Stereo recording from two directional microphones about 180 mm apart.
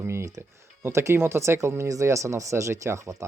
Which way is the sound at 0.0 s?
15° right (ahead or behind).